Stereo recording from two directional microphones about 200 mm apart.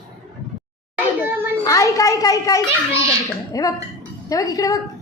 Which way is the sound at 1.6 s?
15° left (ahead or behind).